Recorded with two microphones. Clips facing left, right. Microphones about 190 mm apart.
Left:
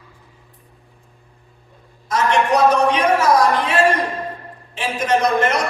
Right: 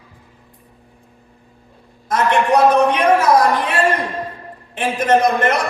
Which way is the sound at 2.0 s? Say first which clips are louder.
Right 1 dB; 55° right (ahead or behind).